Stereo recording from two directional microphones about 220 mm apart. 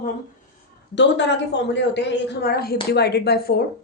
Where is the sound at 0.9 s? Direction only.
55° left (ahead or behind).